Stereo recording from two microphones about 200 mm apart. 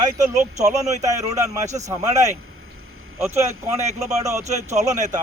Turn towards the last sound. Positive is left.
turn(degrees=-35)  # may be behind; listen again after turning